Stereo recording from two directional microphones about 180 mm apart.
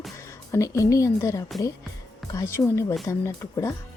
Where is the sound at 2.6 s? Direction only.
20° left (ahead or behind).